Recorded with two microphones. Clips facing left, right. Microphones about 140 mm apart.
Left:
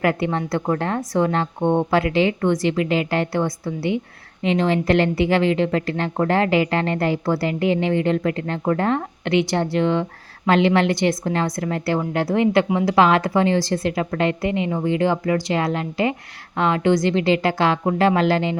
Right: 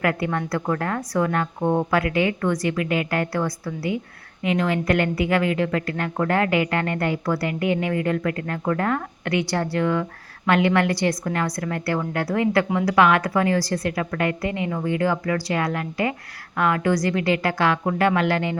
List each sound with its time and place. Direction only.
0.0 s a woman's voice: 25° left (ahead or behind)